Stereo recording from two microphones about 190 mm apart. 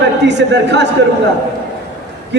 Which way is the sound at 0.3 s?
65° right (ahead or behind).